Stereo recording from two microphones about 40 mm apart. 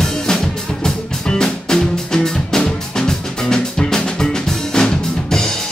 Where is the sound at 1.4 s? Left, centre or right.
Centre.